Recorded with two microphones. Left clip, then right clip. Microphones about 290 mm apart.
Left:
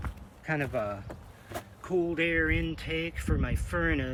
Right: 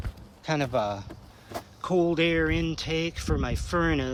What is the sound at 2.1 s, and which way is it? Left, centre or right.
Speech, centre.